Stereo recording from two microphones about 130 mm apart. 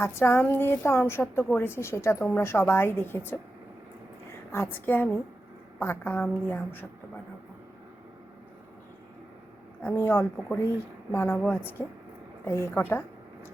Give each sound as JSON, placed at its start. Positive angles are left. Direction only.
{"t": 0.0, "sound": "a woman's voice", "side_deg": 20}
{"t": 4.5, "sound": "speech", "side_deg": 15}
{"t": 9.8, "sound": "speech", "side_deg": 15}